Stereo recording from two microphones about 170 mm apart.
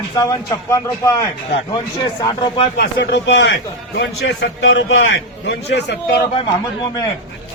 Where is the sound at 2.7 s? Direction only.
80° left.